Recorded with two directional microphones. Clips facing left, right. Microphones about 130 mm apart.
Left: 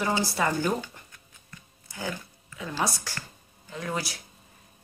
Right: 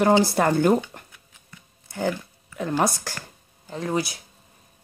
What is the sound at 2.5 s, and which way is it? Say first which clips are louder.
Speech: right 7 dB; 55° right (ahead or behind).